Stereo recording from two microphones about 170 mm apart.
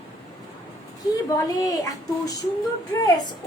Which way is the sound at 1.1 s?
20° left (ahead or behind).